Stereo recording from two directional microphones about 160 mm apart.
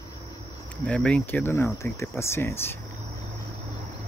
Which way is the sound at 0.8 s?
5° left (ahead or behind).